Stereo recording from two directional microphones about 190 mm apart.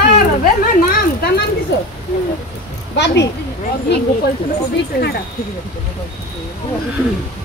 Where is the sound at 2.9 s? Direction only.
65° left (ahead or behind).